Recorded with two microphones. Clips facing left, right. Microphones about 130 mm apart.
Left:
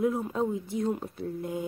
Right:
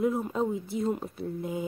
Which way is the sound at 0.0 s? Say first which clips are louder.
Even; centre (ahead or behind).